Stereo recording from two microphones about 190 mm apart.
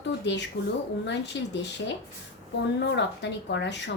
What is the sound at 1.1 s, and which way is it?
A woman's voice, 65° left (ahead or behind).